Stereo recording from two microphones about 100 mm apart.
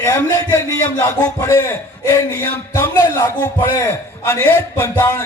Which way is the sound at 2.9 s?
40° left (ahead or behind).